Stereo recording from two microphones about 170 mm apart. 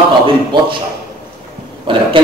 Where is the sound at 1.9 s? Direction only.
30° right (ahead or behind).